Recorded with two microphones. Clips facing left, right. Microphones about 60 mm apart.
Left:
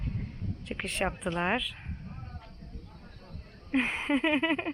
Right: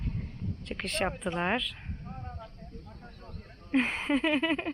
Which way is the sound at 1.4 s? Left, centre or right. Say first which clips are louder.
Even; centre.